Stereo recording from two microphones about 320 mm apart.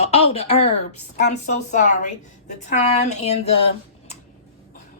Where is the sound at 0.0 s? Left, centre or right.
Centre.